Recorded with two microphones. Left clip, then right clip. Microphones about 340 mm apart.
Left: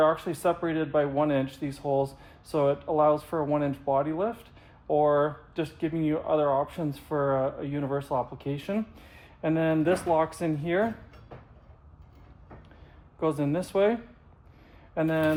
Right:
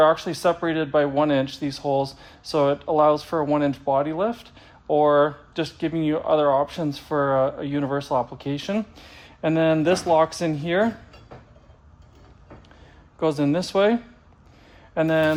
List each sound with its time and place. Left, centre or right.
0.0 s speech: right
13.1 s speech: right